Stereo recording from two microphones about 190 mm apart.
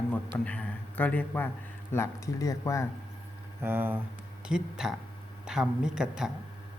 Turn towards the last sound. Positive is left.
turn(degrees=-5)  # may be behind; listen again after turning